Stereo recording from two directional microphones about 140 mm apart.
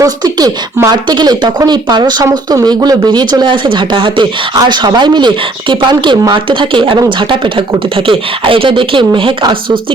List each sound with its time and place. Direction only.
0.0 s speech: 30° right (ahead or behind)